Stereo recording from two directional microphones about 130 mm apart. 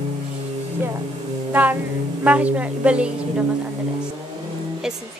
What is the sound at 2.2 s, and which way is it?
A woman's voice, 10° right (ahead or behind).